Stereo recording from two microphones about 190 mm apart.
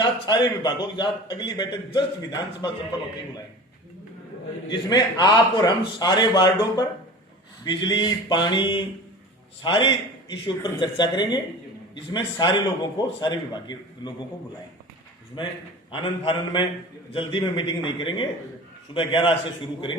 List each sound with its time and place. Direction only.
0.0 s a man's voice: 25° left (ahead or behind)
4.7 s a man's voice: 20° left (ahead or behind)
15.9 s a man's voice: 25° left (ahead or behind)